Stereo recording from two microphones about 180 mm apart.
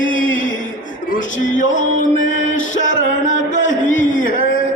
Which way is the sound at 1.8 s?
45° left (ahead or behind).